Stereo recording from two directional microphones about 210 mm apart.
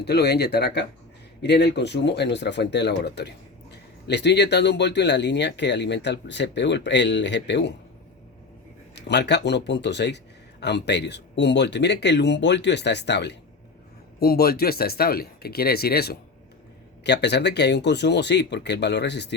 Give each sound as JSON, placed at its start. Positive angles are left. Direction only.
{"t": 0.0, "sound": "speech", "side_deg": 50}
{"t": 9.0, "sound": "speech", "side_deg": 55}